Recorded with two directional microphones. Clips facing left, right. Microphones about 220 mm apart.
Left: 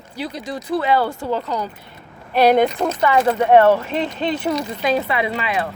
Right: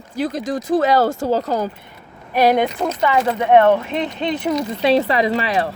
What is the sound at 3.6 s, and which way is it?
Speech, 5° left (ahead or behind).